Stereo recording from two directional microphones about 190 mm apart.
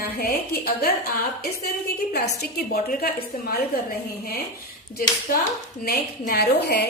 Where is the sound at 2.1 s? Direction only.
60° left (ahead or behind).